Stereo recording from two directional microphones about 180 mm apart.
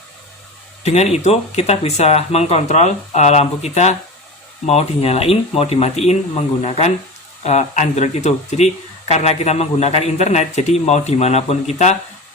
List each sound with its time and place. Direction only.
0.9 s speech: 35° left (ahead or behind)